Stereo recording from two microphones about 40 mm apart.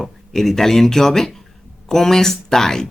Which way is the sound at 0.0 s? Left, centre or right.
Centre.